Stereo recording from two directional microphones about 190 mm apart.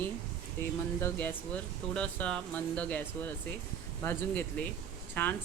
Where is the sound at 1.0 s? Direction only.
10° left (ahead or behind).